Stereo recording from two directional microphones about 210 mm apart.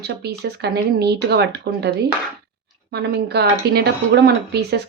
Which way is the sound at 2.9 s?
50° right (ahead or behind).